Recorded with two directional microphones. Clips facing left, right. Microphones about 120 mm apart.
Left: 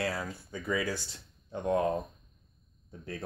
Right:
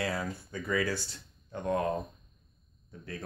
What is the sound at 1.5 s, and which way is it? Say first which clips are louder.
Speech: left 2 dB; 20° left (ahead or behind).